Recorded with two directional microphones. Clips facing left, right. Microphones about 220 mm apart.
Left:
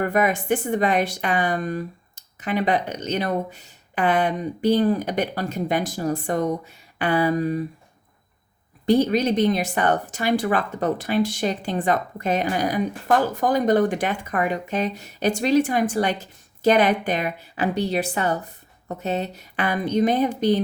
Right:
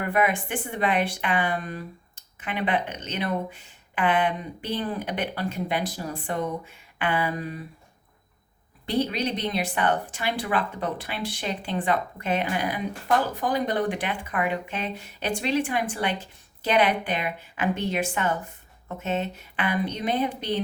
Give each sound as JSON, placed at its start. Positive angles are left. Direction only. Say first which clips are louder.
{"t": 0.0, "sound": "a woman's voice", "louder": "left 3 dB", "side_deg": 40}
{"t": 8.9, "sound": "speech", "louder": "left 7 dB", "side_deg": 45}